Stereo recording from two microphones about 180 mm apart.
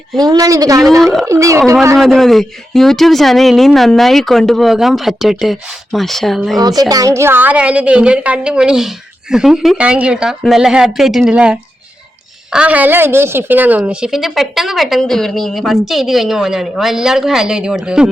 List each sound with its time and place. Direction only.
0.2 s a woman's voice: 20° right (ahead or behind)
2.0 s a woman's voice: centre (ahead or behind)
6.6 s a woman's voice: 20° right (ahead or behind); by 18.1 s 5° right (ahead or behind)